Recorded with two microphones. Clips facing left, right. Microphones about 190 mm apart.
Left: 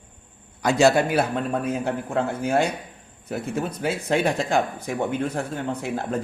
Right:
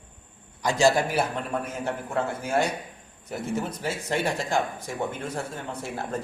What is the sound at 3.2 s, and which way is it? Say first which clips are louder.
Speech: left 2 dB; 60° left (ahead or behind).